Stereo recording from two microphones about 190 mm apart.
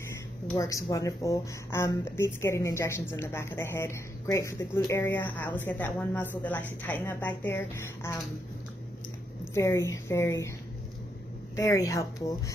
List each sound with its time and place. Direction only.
0.6 s speech: 15° left (ahead or behind)
9.5 s speech: 15° left (ahead or behind)
11.5 s speech: 15° left (ahead or behind)